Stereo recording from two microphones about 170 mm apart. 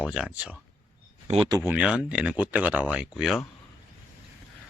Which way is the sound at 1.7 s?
5° right (ahead or behind).